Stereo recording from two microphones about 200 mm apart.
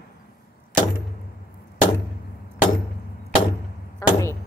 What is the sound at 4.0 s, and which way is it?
Speech, 15° left (ahead or behind).